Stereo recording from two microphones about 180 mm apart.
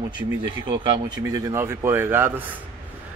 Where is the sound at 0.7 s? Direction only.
20° right (ahead or behind).